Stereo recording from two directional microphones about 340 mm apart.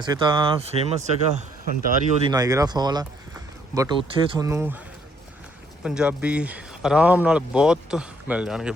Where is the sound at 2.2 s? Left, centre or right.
Centre.